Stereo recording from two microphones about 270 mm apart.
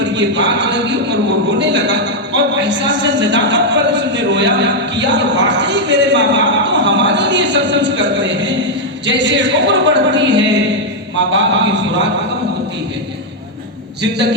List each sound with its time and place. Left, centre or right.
0.0 s a man's voice: right